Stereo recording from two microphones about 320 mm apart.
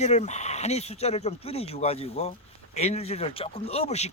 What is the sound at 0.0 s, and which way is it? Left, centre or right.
Speech, left.